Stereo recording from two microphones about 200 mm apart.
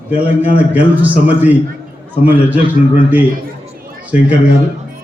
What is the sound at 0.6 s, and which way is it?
A man's voice, 10° right (ahead or behind).